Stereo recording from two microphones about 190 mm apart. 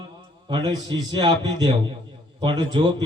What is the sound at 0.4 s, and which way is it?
A man's voice, 20° right (ahead or behind).